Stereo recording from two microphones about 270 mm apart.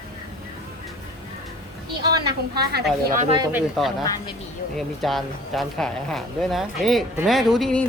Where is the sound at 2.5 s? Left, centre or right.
Right.